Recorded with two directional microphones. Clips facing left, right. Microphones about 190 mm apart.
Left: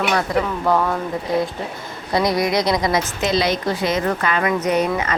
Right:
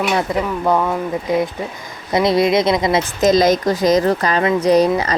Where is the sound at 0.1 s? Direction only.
15° right (ahead or behind).